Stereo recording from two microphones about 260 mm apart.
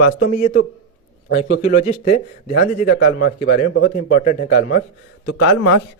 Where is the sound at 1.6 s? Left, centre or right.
Left.